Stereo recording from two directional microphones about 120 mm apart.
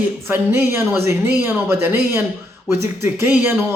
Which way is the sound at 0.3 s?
20° right (ahead or behind).